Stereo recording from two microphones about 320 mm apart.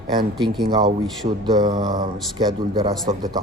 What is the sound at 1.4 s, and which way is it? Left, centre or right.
A man's voice, centre.